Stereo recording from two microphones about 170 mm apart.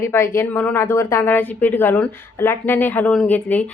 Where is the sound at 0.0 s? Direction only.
15° left (ahead or behind).